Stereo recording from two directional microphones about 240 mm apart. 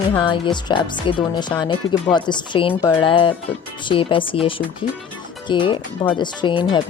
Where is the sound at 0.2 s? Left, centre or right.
Centre.